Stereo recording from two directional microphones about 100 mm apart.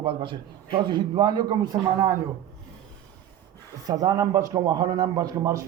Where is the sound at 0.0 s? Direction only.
60° right (ahead or behind); by 2.1 s 35° right (ahead or behind).